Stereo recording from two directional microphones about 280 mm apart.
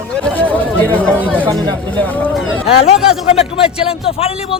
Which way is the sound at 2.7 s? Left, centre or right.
Left.